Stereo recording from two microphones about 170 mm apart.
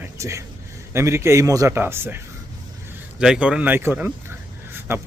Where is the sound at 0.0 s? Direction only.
15° right (ahead or behind).